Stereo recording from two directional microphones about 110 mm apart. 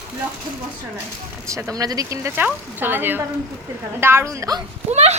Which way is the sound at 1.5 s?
30° right (ahead or behind).